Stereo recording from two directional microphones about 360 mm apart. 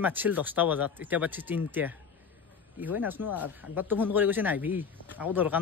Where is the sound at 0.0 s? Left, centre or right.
Centre.